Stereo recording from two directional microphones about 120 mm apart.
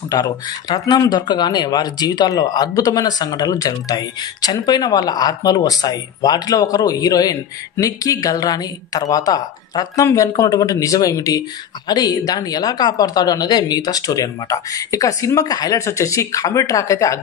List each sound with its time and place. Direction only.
0.1 s speech: 30° left (ahead or behind)